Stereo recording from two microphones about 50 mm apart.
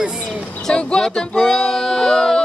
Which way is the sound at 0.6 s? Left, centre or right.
Centre.